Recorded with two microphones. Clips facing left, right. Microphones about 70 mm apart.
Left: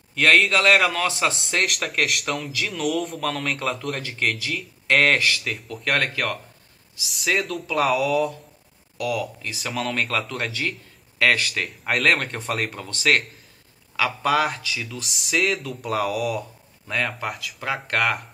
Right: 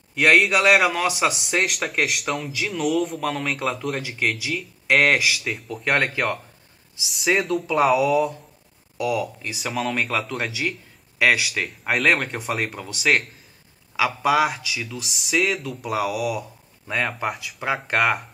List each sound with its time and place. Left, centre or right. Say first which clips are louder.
0.1 s a man's voice: right 1 dB; centre
1.6 s speech: even; centre
5.9 s a man's voice: right 2 dB; centre
7.1 s speech: right 3 dB; centre
8.9 s speech: right 2 dB; centre
17.8 s speech: right 2 dB; centre